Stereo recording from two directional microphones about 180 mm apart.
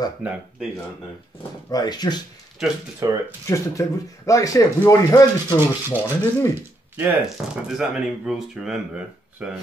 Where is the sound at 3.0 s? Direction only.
15° right (ahead or behind).